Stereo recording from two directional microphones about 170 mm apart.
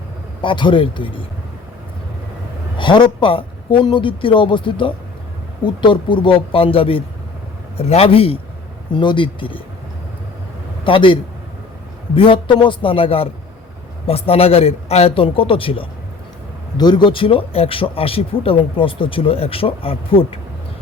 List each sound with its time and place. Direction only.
0.4 s speech: 30° left (ahead or behind)
2.7 s speech: 30° left (ahead or behind)
10.8 s speech: 30° left (ahead or behind)